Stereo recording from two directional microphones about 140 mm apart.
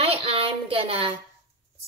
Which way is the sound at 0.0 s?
45° right (ahead or behind).